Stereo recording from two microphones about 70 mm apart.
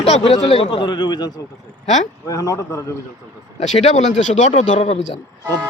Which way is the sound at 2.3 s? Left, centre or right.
Left.